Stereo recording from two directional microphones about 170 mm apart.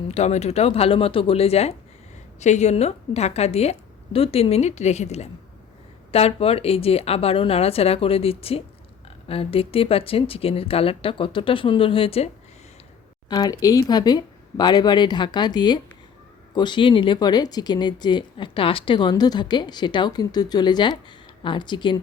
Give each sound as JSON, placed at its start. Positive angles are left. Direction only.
{"t": 0.1, "sound": "speech", "side_deg": 40}
{"t": 13.2, "sound": "speech", "side_deg": 25}